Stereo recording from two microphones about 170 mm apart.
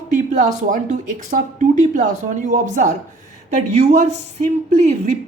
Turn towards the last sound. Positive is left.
turn(degrees=-45)  # may be behind; listen again after turning